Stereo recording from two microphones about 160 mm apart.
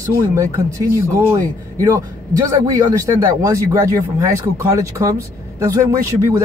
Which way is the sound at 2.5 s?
20° right (ahead or behind).